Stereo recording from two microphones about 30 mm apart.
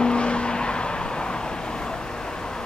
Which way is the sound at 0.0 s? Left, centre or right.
Left.